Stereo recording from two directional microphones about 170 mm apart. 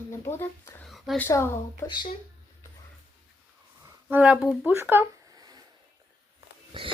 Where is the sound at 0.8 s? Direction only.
Centre (ahead or behind).